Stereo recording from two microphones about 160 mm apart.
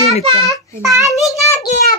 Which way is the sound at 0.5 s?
20° right (ahead or behind).